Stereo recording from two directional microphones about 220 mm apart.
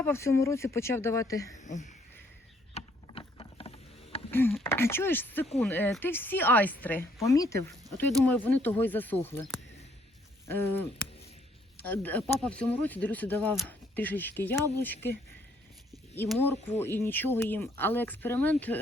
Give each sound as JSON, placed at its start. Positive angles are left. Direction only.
{"t": 0.0, "sound": "speech", "side_deg": 10}
{"t": 2.7, "sound": "mechanisms", "side_deg": 25}
{"t": 4.3, "sound": "speech", "side_deg": 10}
{"t": 7.9, "sound": "speech", "side_deg": 5}
{"t": 10.4, "sound": "a sound", "side_deg": 10}
{"t": 11.8, "sound": "speech", "side_deg": 10}
{"t": 16.4, "sound": "speech", "side_deg": 10}